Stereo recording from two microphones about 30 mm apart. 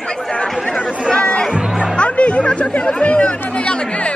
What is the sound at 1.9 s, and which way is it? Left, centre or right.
Chatter, left.